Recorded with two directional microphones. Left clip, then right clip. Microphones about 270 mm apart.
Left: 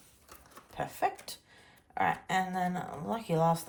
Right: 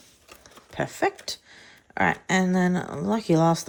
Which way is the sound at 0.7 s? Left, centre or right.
Right.